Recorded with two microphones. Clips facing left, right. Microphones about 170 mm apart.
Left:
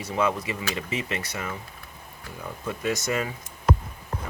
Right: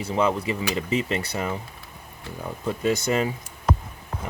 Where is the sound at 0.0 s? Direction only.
30° right (ahead or behind).